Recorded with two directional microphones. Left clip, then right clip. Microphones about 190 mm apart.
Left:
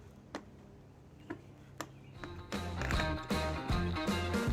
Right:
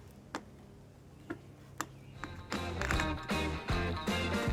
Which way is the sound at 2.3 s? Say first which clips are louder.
Right 3 dB; 5° right (ahead or behind).